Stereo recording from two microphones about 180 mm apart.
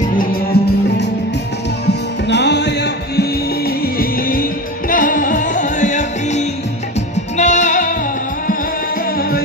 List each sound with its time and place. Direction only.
0.0 s music: 50° left (ahead or behind)
1.9 s music: 70° left (ahead or behind); by 7.9 s 45° left (ahead or behind)